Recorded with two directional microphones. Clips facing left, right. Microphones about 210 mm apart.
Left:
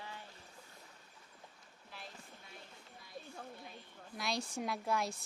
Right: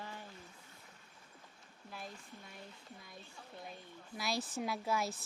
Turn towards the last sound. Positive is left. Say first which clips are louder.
# even
turn(degrees=-5)  # may be behind; listen again after turning